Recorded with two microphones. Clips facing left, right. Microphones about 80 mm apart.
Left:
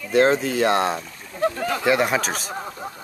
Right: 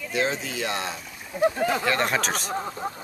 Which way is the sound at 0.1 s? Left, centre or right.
Left.